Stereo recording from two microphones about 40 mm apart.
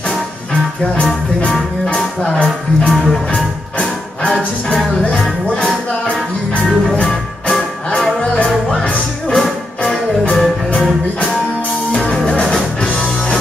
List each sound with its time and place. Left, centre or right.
2.2 s speech: left
2.9 s music: centre
5.1 s music: centre
7.0 s music: left
9.3 s music: centre